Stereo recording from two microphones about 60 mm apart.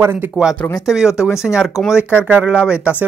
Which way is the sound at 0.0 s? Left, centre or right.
Right.